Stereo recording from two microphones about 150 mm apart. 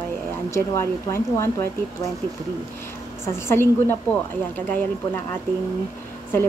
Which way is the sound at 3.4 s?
15° left (ahead or behind).